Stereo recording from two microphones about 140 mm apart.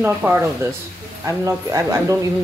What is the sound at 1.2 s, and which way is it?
Speech, 25° right (ahead or behind).